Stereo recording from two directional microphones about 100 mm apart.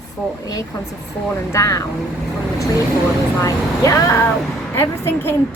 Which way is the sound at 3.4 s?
35° left (ahead or behind).